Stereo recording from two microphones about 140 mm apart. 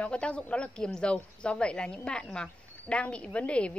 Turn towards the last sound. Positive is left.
turn(degrees=10)  # may be behind; listen again after turning